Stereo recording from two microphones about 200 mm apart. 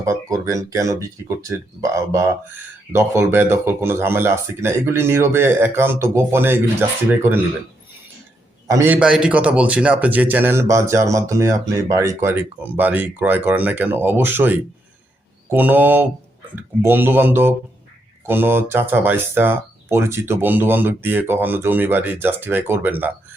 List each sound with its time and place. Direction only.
0.0 s speech: 15° right (ahead or behind)
8.6 s speech: 15° right (ahead or behind)